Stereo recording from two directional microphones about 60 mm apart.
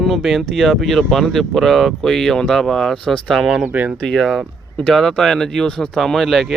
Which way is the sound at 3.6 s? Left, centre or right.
Right.